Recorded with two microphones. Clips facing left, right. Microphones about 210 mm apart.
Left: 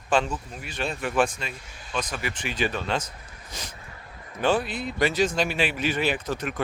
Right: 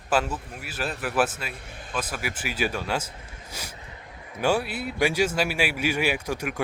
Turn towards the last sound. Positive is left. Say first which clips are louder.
# even
turn(degrees=-10)  # may be behind; listen again after turning